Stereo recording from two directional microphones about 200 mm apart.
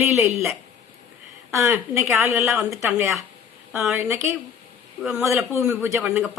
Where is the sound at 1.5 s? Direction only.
15° right (ahead or behind).